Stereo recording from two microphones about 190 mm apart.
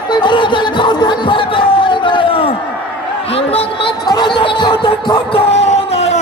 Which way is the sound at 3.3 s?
30° left (ahead or behind).